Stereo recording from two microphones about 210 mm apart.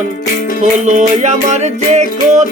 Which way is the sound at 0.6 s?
35° right (ahead or behind).